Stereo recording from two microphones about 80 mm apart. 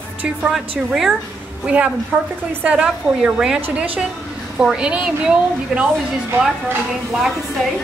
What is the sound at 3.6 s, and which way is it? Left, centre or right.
Speech, right.